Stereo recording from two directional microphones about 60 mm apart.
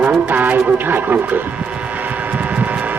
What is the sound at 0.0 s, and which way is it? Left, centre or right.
Music, right.